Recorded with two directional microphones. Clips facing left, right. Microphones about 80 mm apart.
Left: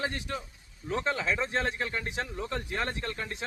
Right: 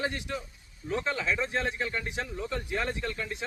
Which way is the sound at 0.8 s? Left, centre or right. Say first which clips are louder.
Even; left.